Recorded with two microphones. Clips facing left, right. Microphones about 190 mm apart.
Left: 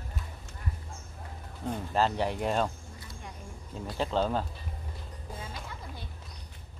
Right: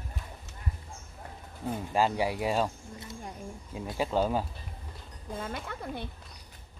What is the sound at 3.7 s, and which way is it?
Speech, 10° right (ahead or behind).